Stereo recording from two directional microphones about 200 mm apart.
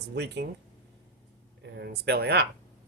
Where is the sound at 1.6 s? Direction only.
55° right (ahead or behind).